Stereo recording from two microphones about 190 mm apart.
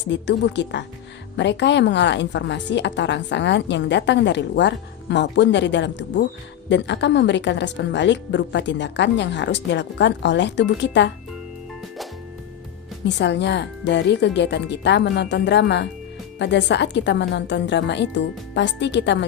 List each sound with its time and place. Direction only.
0.0 s a woman's voice: 70° left (ahead or behind)
13.1 s a woman's voice: 65° left (ahead or behind)